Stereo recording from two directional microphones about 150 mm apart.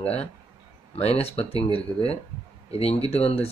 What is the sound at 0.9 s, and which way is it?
Speech, 40° left (ahead or behind).